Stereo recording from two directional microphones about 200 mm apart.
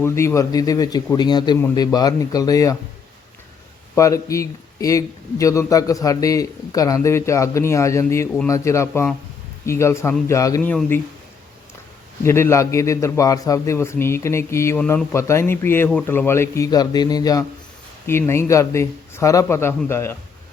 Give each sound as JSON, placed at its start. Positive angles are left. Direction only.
{"t": 0.0, "sound": "a man's voice", "side_deg": 15}
{"t": 3.9, "sound": "a man's voice", "side_deg": 15}
{"t": 12.2, "sound": "a man's voice", "side_deg": 15}